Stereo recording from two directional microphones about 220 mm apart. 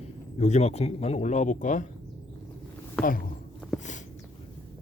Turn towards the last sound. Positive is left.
turn(degrees=35)  # may be behind; listen again after turning